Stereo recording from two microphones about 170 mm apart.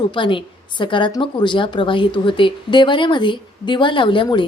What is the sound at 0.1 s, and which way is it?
A woman's voice, 30° left (ahead or behind).